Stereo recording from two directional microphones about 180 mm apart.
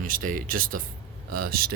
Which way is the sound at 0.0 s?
50° right (ahead or behind).